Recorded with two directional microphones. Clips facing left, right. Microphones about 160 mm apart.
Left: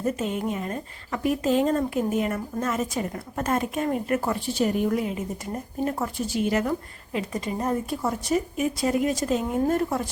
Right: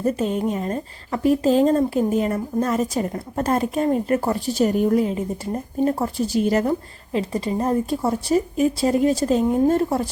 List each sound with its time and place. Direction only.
0.0 s speech: 35° right (ahead or behind)